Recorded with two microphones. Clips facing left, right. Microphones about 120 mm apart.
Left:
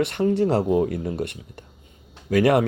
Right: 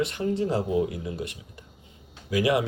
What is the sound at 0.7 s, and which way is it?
Speech, 50° left (ahead or behind).